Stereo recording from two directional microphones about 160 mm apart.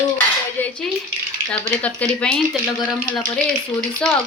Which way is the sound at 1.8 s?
5° left (ahead or behind).